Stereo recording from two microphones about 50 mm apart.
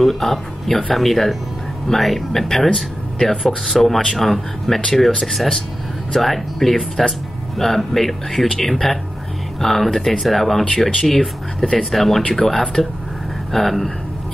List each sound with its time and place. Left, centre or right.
0.0 s speech: centre
12.2 s speech: centre
12.4 s speech: centre